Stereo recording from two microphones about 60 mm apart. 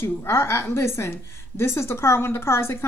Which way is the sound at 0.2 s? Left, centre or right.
Left.